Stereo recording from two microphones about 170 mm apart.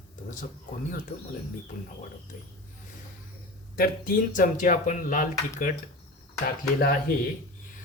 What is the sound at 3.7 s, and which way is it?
Speech, 60° left (ahead or behind).